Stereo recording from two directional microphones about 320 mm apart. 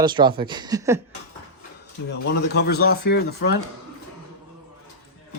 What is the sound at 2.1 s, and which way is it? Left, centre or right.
Speech, left.